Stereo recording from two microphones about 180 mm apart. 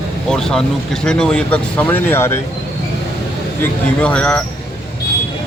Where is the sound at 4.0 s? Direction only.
5° left (ahead or behind).